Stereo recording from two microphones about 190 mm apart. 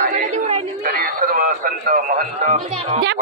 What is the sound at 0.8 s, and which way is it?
Speech, 50° right (ahead or behind).